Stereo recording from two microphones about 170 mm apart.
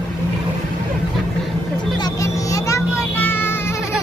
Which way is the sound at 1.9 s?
20° left (ahead or behind).